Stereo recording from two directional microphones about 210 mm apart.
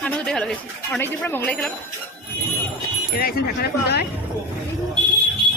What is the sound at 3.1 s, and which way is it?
Speech, 45° left (ahead or behind).